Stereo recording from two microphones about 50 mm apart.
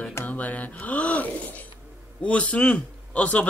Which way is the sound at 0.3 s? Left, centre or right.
Left.